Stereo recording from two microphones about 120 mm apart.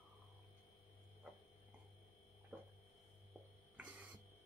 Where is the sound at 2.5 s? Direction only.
20° right (ahead or behind).